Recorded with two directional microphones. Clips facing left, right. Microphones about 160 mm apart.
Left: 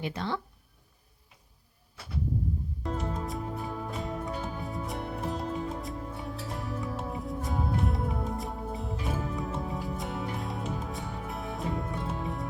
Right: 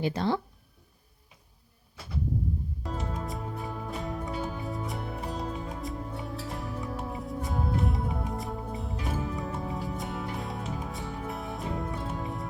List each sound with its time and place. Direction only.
0.0 s speech: 35° right (ahead or behind)
2.8 s music: centre (ahead or behind)